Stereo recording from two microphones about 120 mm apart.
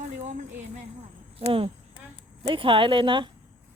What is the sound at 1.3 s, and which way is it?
Speech, 50° right (ahead or behind).